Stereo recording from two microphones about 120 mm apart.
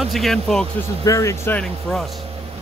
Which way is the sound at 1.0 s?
25° left (ahead or behind).